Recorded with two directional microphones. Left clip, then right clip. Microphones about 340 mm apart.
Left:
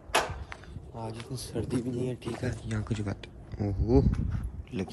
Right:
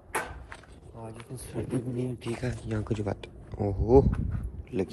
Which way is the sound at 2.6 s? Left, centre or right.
Centre.